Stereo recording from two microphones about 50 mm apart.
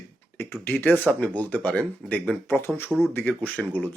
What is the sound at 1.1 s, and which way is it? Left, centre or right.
A man's voice, left.